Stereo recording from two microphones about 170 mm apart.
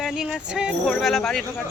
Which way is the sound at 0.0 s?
5° right (ahead or behind).